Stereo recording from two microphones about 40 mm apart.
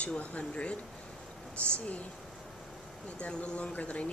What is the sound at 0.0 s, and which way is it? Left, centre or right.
Speech, left.